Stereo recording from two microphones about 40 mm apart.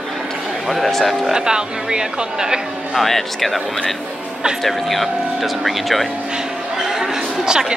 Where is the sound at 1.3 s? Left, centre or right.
Centre.